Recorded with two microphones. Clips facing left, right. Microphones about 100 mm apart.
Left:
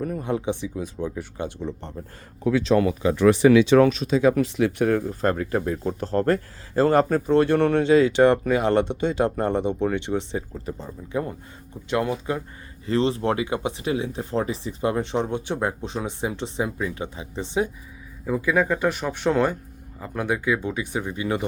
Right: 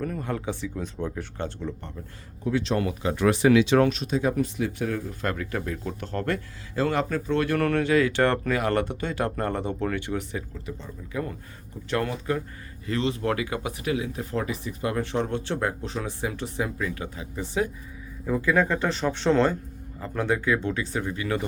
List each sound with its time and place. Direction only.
0.0 s speech: 10° left (ahead or behind)
0.8 s speech: 5° left (ahead or behind)
2.5 s speech: 90° left
4.2 s speech: 90° left; by 5.0 s 60° left (ahead or behind)
5.0 s speech: 35° left (ahead or behind)
10.5 s speech: 40° left (ahead or behind)
11.9 s speech: 15° left (ahead or behind)
12.8 s speech: 30° left (ahead or behind)
18.3 s speech: 10° left (ahead or behind)